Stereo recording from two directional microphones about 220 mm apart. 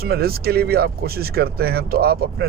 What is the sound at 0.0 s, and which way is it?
Speech, 45° right (ahead or behind).